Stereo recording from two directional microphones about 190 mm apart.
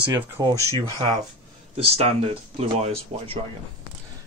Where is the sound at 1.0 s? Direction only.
35° right (ahead or behind).